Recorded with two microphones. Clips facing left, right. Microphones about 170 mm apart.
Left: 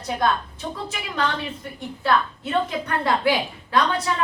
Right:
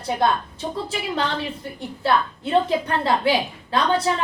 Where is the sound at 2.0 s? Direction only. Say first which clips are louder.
Right 1 dB; 30° right (ahead or behind).